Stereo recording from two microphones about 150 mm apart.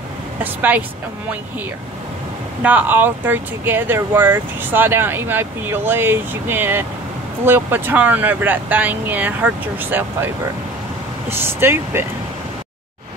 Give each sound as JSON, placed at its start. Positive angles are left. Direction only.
{"t": 0.4, "sound": "speech", "side_deg": -10}
{"t": 2.6, "sound": "speech", "side_deg": -10}
{"t": 11.3, "sound": "speech", "side_deg": -15}